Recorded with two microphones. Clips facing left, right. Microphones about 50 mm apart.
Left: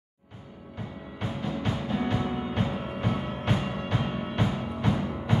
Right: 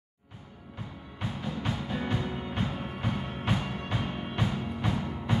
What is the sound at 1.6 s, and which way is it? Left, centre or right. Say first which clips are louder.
Music: left 4 dB; centre.